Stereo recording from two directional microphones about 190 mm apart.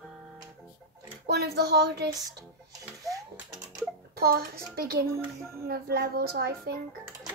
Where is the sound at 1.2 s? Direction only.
55° right (ahead or behind).